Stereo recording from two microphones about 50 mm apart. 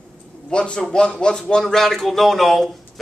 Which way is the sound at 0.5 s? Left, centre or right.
Centre.